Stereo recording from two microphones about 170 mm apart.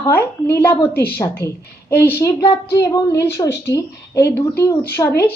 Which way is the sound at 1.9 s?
15° left (ahead or behind).